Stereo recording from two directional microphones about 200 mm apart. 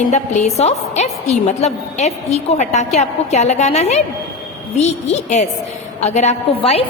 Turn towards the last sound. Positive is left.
turn(degrees=30)  # may be behind; listen again after turning